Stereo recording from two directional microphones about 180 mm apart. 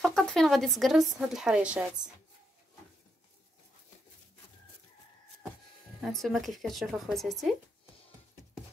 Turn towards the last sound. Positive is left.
turn(degrees=0)  # may be behind; listen again after turning